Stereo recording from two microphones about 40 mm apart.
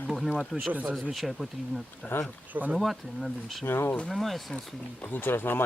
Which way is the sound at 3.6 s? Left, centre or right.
Left.